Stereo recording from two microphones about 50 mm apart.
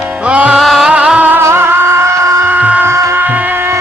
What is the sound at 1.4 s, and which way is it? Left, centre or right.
Music, right.